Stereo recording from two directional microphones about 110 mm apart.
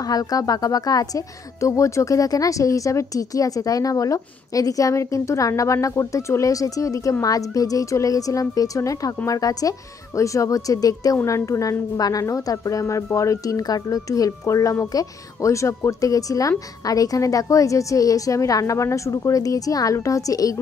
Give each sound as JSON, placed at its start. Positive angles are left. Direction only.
{"t": 0.0, "sound": "a woman's voice", "side_deg": 35}